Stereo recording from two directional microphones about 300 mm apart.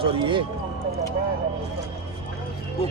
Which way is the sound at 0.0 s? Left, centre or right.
Centre.